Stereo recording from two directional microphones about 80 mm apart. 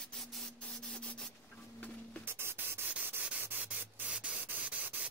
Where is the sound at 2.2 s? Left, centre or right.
Right.